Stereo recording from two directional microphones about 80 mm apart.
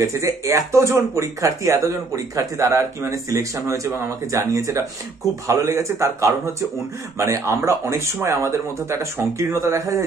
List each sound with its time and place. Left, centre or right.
0.0 s speech: right